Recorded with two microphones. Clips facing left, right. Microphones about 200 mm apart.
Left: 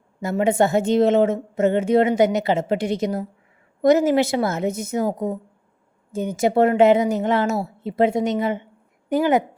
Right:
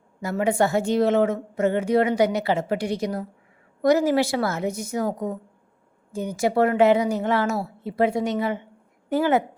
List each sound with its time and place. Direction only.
0.2 s a woman's voice: 25° left (ahead or behind)
6.1 s a woman's voice: 20° left (ahead or behind)